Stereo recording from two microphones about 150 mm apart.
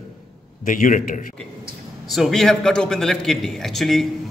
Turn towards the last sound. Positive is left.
turn(degrees=0)  # may be behind; listen again after turning